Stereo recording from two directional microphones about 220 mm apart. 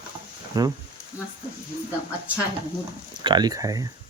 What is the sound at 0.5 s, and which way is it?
Speech, 20° right (ahead or behind).